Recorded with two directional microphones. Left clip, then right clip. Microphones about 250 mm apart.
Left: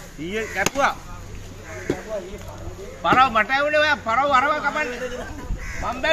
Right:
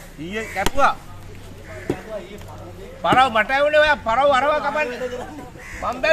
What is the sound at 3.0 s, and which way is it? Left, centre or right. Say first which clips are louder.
A man's voice: right 1 dB; right.